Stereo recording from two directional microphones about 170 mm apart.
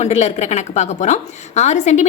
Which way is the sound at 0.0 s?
40° left (ahead or behind).